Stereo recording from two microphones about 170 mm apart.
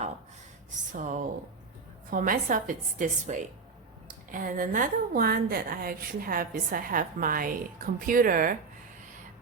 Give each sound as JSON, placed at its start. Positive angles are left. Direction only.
{"t": 0.9, "sound": "a woman's voice", "side_deg": -50}